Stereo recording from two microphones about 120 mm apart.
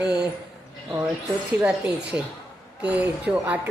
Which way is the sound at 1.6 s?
10° right (ahead or behind).